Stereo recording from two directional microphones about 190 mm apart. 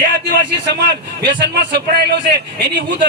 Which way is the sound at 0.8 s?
60° right (ahead or behind).